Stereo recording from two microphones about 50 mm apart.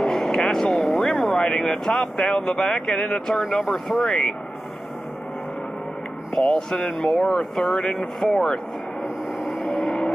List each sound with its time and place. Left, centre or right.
0.0 s vehicle: centre
1.5 s vehicle: centre
1.9 s speech: centre
3.6 s speech: centre
4.0 s speech: centre
6.3 s speech: centre
7.8 s speech: left
8.2 s speech: centre
9.0 s vehicle: centre